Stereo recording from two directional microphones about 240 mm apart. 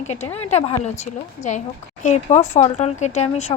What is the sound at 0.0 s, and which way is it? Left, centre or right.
A woman's voice, left.